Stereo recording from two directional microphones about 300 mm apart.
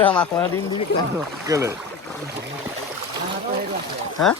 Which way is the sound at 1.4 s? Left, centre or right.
Centre.